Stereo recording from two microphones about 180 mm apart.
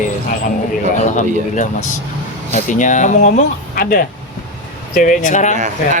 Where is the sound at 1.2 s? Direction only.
45° left (ahead or behind).